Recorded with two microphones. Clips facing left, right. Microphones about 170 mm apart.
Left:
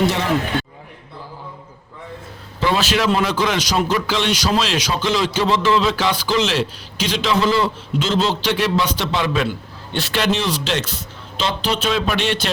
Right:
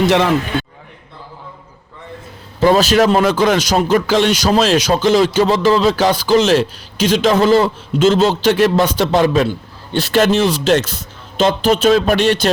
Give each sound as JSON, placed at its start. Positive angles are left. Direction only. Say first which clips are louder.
{"t": 2.6, "sound": "speech", "louder": "right 7 dB", "side_deg": -40}